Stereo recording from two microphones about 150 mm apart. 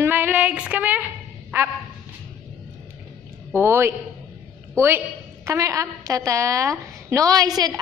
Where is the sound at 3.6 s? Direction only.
15° right (ahead or behind).